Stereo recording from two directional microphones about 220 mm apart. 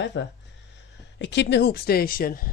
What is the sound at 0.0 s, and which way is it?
Speech, 55° left (ahead or behind).